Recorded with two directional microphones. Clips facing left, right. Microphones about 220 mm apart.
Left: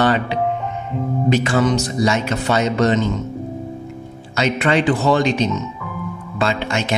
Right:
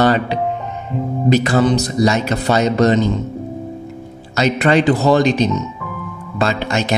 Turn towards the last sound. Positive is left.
turn(degrees=-40)  # may be behind; listen again after turning